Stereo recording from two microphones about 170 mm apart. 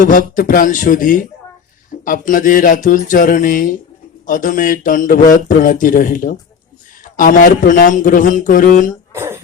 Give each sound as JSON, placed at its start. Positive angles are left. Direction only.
{"t": 0.0, "sound": "a man's voice", "side_deg": 50}
{"t": 9.1, "sound": "cough", "side_deg": -15}